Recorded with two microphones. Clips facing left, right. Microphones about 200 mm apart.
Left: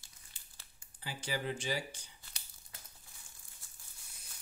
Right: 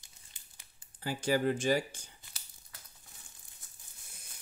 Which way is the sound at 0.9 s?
45° right (ahead or behind).